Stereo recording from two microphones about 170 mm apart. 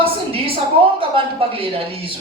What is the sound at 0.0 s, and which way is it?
A woman's voice, 35° right (ahead or behind).